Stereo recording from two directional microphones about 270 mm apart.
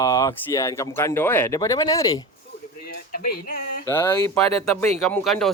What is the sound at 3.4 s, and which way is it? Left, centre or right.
Speech, left.